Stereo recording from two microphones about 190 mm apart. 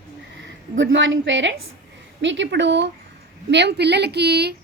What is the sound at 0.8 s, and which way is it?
A woman's voice, 75° right (ahead or behind).